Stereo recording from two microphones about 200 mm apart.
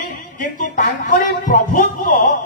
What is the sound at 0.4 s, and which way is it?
A man's voice, 40° left (ahead or behind).